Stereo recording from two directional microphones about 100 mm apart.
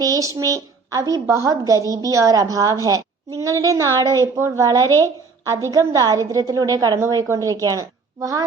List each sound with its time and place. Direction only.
0.0 s a woman's voice: 35° right (ahead or behind)